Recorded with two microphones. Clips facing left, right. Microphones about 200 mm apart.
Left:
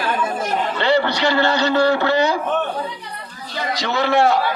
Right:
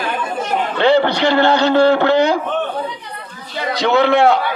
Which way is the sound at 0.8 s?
55° right (ahead or behind).